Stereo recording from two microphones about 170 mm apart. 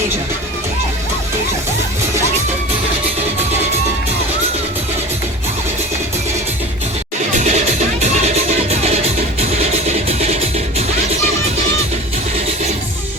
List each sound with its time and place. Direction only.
7.3 s music: 40° right (ahead or behind)
8.7 s music: 40° right (ahead or behind)